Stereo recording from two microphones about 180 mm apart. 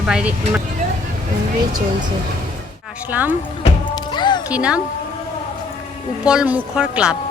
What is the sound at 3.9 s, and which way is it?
Music, 25° left (ahead or behind).